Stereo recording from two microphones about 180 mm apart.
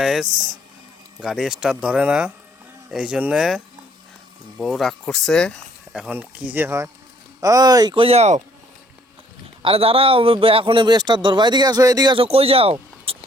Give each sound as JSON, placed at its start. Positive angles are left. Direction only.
{"t": 0.0, "sound": "a sound", "side_deg": 0}
{"t": 1.2, "sound": "speech", "side_deg": -5}
{"t": 4.6, "sound": "a man's voice", "side_deg": 0}
{"t": 9.6, "sound": "a man's voice", "side_deg": -30}